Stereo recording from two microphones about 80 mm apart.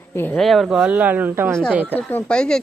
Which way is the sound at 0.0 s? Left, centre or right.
Left.